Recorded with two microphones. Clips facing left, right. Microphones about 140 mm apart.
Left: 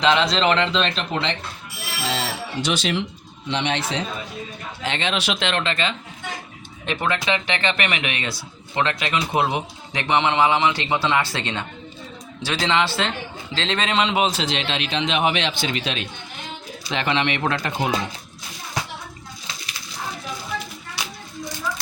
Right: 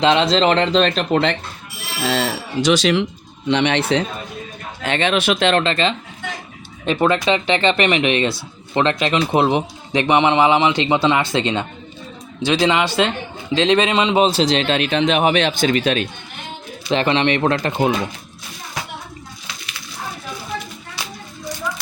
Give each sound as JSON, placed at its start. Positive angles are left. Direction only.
{"t": 0.0, "sound": "speech", "side_deg": -30}
{"t": 2.0, "sound": "speech", "side_deg": -80}
{"t": 3.4, "sound": "a man's voice", "side_deg": -70}
{"t": 14.2, "sound": "a man's voice", "side_deg": -30}
{"t": 16.9, "sound": "speech", "side_deg": -35}